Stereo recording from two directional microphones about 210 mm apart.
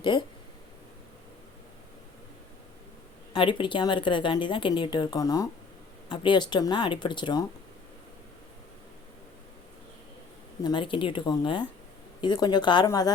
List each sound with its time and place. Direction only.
0.0 s a woman's voice: 20° left (ahead or behind)
3.3 s a woman's voice: 25° left (ahead or behind)
10.6 s a woman's voice: 20° left (ahead or behind)